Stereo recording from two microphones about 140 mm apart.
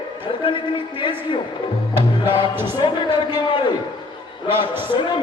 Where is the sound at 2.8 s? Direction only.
35° left (ahead or behind).